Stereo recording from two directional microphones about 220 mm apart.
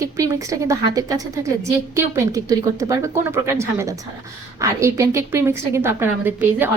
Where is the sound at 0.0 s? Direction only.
15° right (ahead or behind).